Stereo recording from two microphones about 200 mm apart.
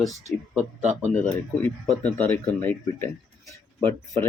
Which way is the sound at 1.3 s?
10° left (ahead or behind).